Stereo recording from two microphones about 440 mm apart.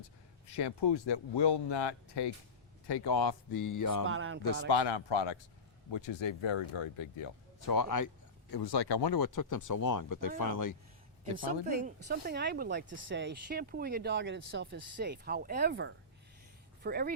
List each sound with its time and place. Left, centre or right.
0.5 s speech: left
2.8 s speech: left
4.0 s speech: right
4.7 s speech: left
7.7 s speech: left
11.3 s speech: centre